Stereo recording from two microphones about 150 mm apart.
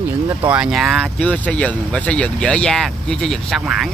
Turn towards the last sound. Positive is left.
turn(degrees=0)  # may be behind; listen again after turning